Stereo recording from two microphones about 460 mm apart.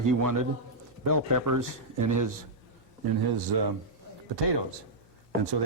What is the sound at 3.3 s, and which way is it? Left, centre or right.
Speech, right.